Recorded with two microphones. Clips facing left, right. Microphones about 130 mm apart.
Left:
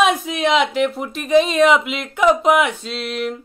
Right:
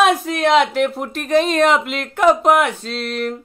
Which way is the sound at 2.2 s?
45° right (ahead or behind).